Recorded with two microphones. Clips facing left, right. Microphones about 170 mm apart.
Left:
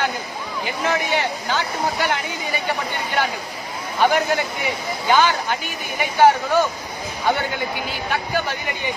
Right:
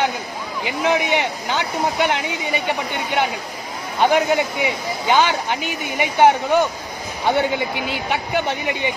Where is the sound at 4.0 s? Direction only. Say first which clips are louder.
Right 2 dB; 15° right (ahead or behind).